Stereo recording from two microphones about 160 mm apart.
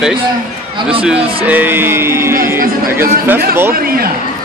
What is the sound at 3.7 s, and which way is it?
Chatter, 70° right (ahead or behind).